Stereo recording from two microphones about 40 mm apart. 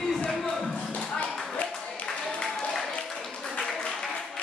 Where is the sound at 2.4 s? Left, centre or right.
Centre.